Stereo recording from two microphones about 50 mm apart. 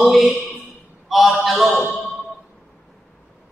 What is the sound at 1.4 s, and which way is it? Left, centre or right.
Speech, centre.